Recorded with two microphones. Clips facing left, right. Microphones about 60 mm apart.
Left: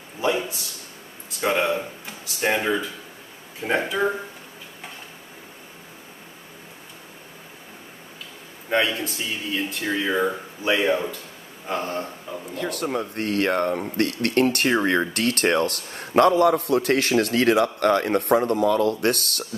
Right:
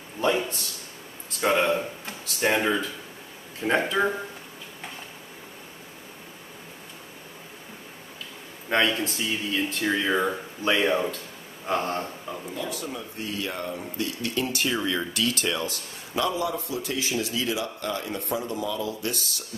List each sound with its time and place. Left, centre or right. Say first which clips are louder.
0.2 s a man's voice: left 1 dB; centre
8.6 s a man's voice: left 1 dB; centre
12.5 s speech: left 9 dB; left